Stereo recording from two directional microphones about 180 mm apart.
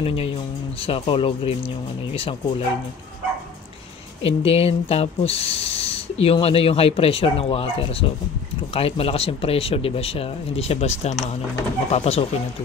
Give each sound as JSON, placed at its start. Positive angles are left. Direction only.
{"t": 0.0, "sound": "speech", "side_deg": 30}
{"t": 4.2, "sound": "speech", "side_deg": 30}